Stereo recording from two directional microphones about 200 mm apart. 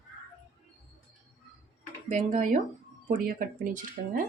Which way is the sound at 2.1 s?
35° right (ahead or behind).